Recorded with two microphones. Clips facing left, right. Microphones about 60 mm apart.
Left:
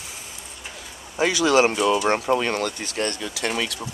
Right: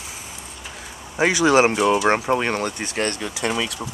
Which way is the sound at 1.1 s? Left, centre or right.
Right.